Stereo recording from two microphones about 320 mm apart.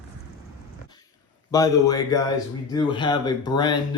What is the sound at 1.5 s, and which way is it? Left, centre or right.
Speech, centre.